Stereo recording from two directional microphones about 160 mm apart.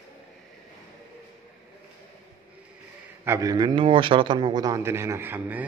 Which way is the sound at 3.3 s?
20° right (ahead or behind).